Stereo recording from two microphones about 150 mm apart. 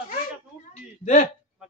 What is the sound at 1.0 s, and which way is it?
Speech, 60° left (ahead or behind).